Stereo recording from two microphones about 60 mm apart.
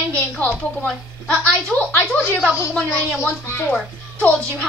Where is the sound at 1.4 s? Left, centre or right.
Centre.